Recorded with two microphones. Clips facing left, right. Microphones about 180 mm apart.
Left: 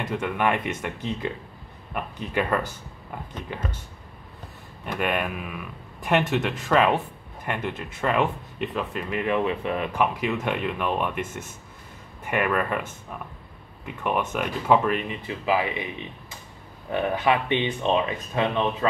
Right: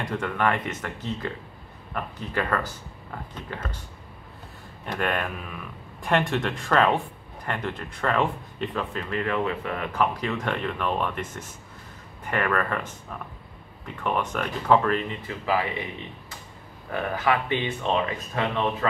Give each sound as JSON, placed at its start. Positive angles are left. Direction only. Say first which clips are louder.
{"t": 0.0, "sound": "speech", "louder": "left 1 dB", "side_deg": 10}
{"t": 4.9, "sound": "speech", "louder": "left 1 dB", "side_deg": 10}
{"t": 14.0, "sound": "speech", "louder": "left 1 dB", "side_deg": 10}
{"t": 16.9, "sound": "speech", "louder": "left 2 dB", "side_deg": 20}